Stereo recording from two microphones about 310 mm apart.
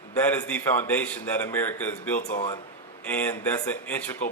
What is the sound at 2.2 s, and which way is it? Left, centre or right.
Speech, left.